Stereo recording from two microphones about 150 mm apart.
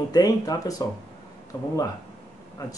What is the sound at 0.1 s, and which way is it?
Speech, 25° left (ahead or behind).